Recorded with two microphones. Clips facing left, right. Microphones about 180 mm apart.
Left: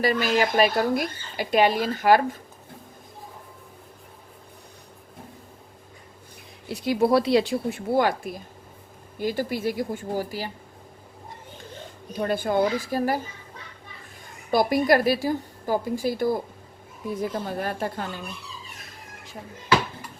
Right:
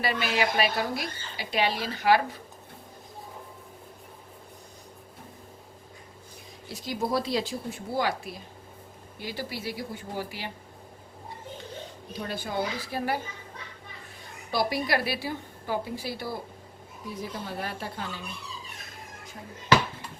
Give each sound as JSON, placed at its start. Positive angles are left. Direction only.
{"t": 0.0, "sound": "speech", "side_deg": 45}
{"t": 6.7, "sound": "speech", "side_deg": 65}
{"t": 12.1, "sound": "speech", "side_deg": 55}
{"t": 14.5, "sound": "speech", "side_deg": 50}